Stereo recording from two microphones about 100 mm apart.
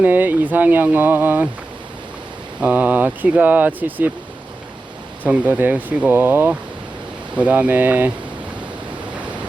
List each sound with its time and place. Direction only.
0.0 s speech: 20° right (ahead or behind)
2.6 s speech: 15° right (ahead or behind)
5.2 s speech: 15° right (ahead or behind)